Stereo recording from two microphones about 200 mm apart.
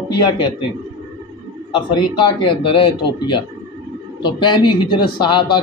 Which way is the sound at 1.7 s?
25° left (ahead or behind).